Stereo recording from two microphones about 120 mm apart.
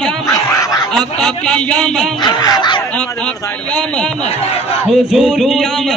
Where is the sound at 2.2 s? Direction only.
35° left (ahead or behind).